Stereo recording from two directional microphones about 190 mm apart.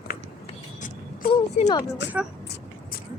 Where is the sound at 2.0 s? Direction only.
65° left (ahead or behind).